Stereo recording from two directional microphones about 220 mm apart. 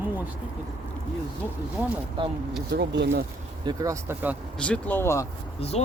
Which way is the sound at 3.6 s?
15° right (ahead or behind).